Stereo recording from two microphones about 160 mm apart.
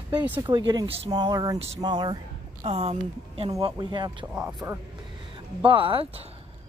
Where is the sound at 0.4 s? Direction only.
30° right (ahead or behind).